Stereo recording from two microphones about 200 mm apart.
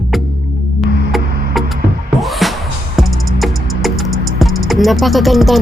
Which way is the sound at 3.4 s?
Centre (ahead or behind).